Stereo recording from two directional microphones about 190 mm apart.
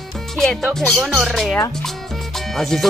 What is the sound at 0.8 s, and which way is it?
Speech, centre (ahead or behind).